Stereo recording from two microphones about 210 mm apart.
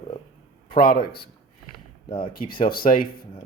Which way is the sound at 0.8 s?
45° left (ahead or behind).